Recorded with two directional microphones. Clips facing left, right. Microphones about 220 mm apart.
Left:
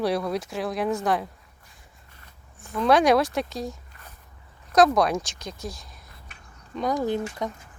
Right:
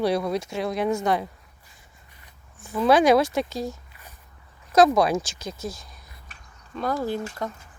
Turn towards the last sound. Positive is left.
turn(degrees=20)  # may be behind; listen again after turning